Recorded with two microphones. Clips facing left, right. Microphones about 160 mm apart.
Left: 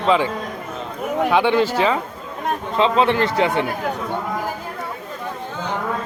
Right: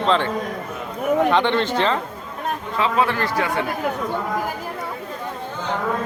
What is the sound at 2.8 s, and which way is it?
Speech, 25° left (ahead or behind).